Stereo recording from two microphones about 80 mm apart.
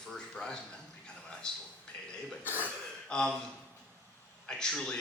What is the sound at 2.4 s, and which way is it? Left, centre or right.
Speech, left.